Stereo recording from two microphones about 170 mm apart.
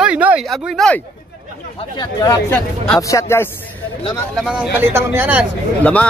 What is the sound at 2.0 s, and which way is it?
Speech, 20° left (ahead or behind).